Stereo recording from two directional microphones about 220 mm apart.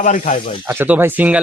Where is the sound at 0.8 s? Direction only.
5° right (ahead or behind).